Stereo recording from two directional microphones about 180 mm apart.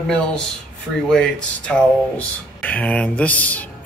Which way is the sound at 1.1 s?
5° left (ahead or behind).